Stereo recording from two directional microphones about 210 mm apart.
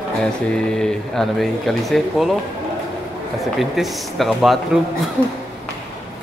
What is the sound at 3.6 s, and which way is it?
Speech, centre (ahead or behind).